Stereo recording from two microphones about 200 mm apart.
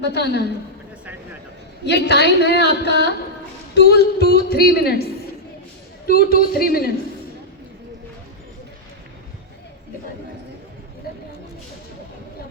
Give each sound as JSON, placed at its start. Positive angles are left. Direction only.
{"t": 0.0, "sound": "a woman's voice", "side_deg": 55}
{"t": 1.8, "sound": "a woman's voice", "side_deg": 55}
{"t": 6.1, "sound": "speech", "side_deg": 50}
{"t": 11.1, "sound": "a sound", "side_deg": 50}